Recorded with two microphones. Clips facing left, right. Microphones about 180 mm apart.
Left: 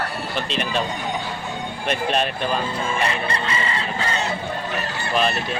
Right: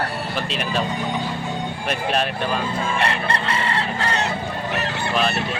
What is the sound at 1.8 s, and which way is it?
Speech, centre (ahead or behind).